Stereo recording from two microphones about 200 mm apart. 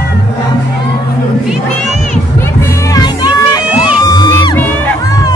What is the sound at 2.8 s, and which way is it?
Music, 20° left (ahead or behind).